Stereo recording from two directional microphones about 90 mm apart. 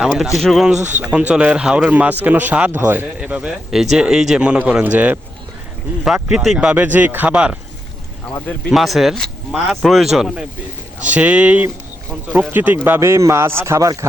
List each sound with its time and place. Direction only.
0.0 s a man's voice: 5° right (ahead or behind)
8.7 s speech: centre (ahead or behind)
11.0 s a man's voice: 15° right (ahead or behind)
13.0 s speech: 35° right (ahead or behind)